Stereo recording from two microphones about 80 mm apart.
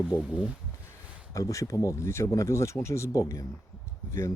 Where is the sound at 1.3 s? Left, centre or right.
Left.